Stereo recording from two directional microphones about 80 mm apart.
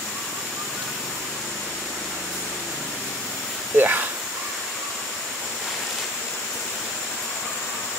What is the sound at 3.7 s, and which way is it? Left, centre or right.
Insect, right.